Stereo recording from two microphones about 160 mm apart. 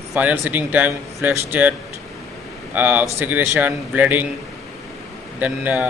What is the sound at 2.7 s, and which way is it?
Speech, 10° right (ahead or behind).